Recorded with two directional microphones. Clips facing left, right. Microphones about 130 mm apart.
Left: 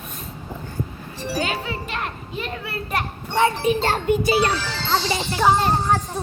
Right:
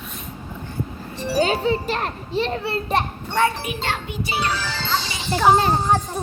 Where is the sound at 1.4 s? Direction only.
30° right (ahead or behind).